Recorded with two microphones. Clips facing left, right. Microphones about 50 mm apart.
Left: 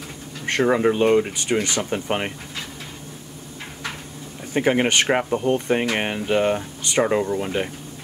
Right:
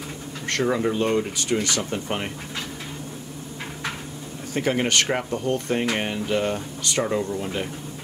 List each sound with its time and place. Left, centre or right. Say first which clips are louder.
0.5 s speech: left 4 dB; left
4.6 s speech: left 3 dB; left